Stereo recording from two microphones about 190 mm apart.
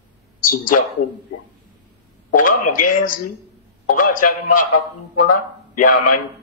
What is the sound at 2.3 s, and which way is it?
A man's voice, 45° left (ahead or behind).